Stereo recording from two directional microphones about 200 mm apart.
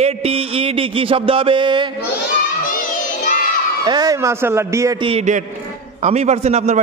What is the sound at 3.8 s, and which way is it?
Speech, 20° right (ahead or behind).